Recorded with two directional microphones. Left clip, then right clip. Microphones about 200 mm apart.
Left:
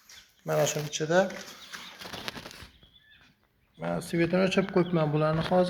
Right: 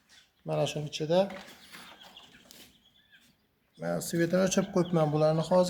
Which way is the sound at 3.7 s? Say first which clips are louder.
Left 1 dB; 15° right (ahead or behind).